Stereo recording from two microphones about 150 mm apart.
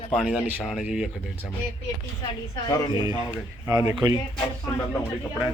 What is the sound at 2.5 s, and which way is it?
Speech, 25° left (ahead or behind).